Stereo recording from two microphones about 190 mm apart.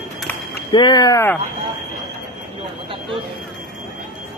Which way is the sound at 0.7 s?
20° left (ahead or behind).